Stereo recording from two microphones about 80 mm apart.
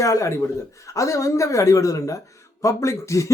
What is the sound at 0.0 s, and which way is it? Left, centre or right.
A man's voice, left.